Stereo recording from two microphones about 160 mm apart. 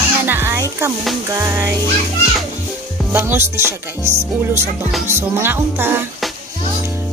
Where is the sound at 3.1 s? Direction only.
15° right (ahead or behind).